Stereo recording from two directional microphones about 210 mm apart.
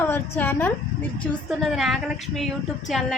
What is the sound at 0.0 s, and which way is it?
Speech, 10° left (ahead or behind).